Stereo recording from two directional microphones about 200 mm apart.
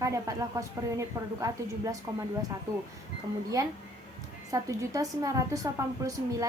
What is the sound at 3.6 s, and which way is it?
A woman's voice, 15° right (ahead or behind).